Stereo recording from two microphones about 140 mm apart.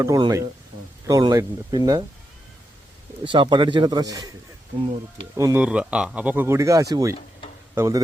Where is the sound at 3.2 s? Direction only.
35° right (ahead or behind).